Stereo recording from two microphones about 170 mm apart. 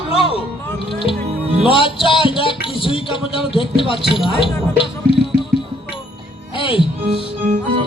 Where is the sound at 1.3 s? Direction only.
40° right (ahead or behind).